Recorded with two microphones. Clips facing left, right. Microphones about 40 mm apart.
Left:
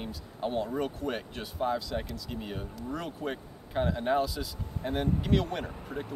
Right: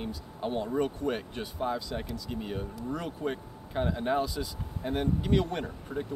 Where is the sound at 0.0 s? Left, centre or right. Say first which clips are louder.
Even; centre.